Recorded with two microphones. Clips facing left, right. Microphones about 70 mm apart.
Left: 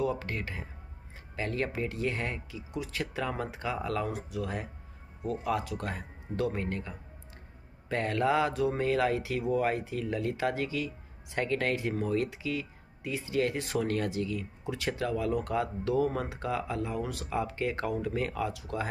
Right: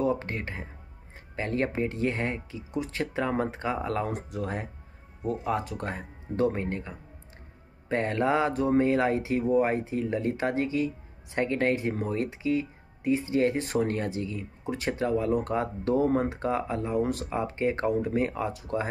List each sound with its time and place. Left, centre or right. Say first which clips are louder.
0.0 s speech: right 4 dB; right